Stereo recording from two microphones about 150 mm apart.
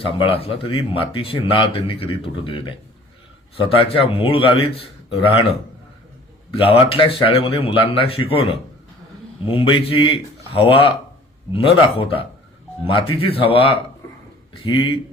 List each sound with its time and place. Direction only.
0.0 s speech: 40° left (ahead or behind)
6.5 s speech: 40° left (ahead or behind)